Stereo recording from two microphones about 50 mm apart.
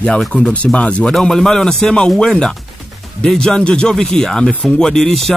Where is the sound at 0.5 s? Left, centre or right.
Left.